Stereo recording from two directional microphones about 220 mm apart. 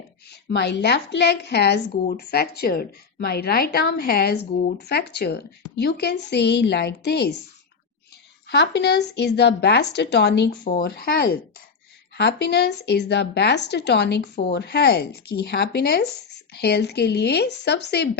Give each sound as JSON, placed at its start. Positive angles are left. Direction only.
{"t": 0.4, "sound": "speech", "side_deg": 50}
{"t": 8.4, "sound": "speech", "side_deg": 50}
{"t": 10.7, "sound": "speech", "side_deg": 40}